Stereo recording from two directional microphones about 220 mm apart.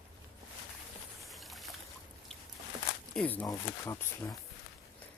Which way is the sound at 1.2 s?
Centre (ahead or behind).